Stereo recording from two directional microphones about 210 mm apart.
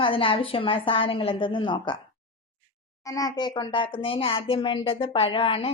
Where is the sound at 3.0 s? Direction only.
15° left (ahead or behind).